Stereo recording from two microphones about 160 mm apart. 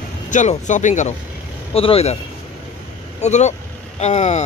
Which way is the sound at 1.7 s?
35° left (ahead or behind).